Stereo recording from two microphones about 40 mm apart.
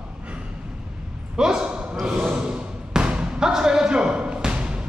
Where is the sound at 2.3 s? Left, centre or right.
Right.